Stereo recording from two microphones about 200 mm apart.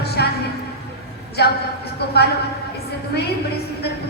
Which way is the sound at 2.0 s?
55° left (ahead or behind).